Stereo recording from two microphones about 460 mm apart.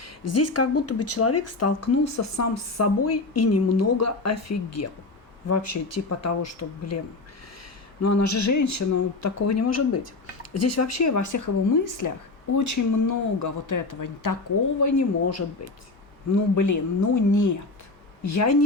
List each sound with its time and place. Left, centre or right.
0.0 s speech: left
8.0 s speech: left